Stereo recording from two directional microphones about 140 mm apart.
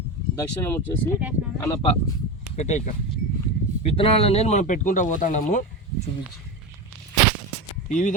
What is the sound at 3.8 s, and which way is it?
Speech, 40° left (ahead or behind).